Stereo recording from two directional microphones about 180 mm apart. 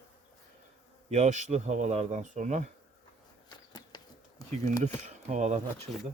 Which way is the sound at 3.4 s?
25° left (ahead or behind).